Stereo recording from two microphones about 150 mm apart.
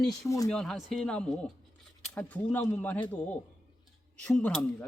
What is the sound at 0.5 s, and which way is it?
Speech, 5° left (ahead or behind).